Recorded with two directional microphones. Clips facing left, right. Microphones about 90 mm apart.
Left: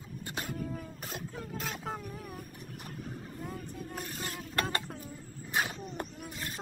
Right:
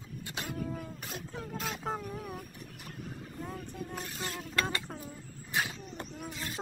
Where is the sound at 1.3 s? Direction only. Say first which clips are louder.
Right 4 dB; centre (ahead or behind).